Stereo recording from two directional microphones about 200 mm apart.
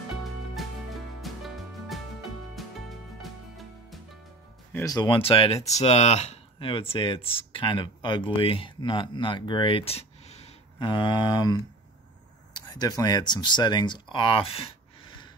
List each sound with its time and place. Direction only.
0.2 s music: centre (ahead or behind)
4.7 s speech: 20° left (ahead or behind)